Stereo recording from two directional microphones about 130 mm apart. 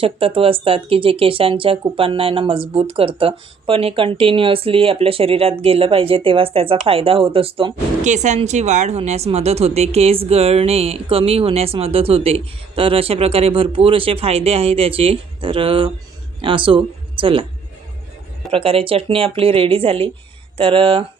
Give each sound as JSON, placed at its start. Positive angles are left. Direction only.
{"t": 0.0, "sound": "speech", "side_deg": -45}
{"t": 8.0, "sound": "speech", "side_deg": -65}
{"t": 18.5, "sound": "speech", "side_deg": -45}